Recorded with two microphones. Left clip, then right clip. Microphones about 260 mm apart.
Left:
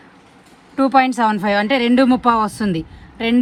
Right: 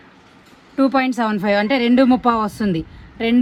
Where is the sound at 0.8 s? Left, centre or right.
Left.